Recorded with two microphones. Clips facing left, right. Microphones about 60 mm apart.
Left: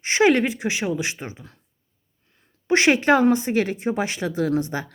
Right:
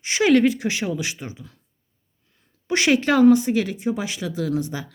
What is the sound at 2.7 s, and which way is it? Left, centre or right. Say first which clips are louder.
Speech: left 2 dB; left.